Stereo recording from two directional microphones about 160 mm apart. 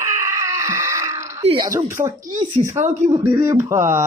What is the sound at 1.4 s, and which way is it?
Speech, 30° right (ahead or behind).